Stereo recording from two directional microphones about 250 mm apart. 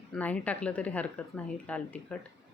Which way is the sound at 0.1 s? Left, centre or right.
Centre.